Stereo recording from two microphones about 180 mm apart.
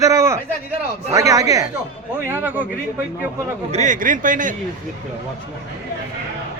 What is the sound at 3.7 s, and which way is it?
Speech, 45° right (ahead or behind).